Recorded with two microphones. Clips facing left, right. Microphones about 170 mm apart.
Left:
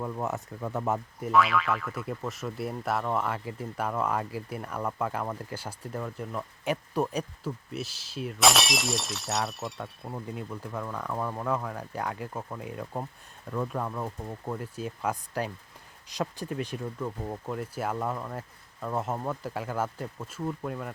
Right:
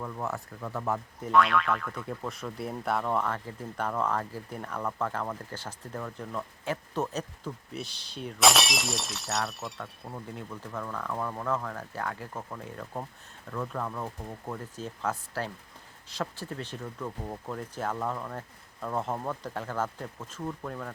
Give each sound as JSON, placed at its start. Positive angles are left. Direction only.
{"t": 0.0, "sound": "speech", "side_deg": 20}
{"t": 1.2, "sound": "speech", "side_deg": 0}
{"t": 10.3, "sound": "speech", "side_deg": 15}